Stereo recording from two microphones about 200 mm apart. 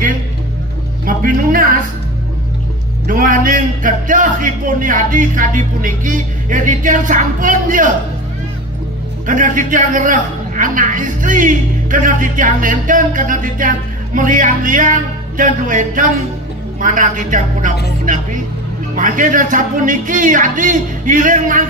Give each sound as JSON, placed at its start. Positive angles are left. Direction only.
{"t": 1.0, "sound": "a man's voice", "side_deg": -45}
{"t": 3.1, "sound": "a man's voice", "side_deg": -45}
{"t": 9.2, "sound": "a man's voice", "side_deg": -40}